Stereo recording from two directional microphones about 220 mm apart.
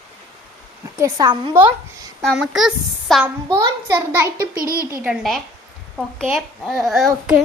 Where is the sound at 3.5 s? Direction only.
10° right (ahead or behind).